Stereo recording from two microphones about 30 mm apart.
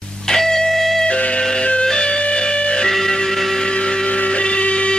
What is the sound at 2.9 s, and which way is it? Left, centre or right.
Music, centre.